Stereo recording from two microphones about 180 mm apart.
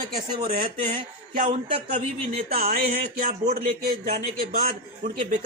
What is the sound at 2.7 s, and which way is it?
Speech, 60° right (ahead or behind).